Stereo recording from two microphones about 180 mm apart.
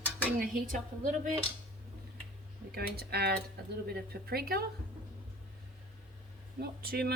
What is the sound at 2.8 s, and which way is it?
A woman's voice, 60° right (ahead or behind).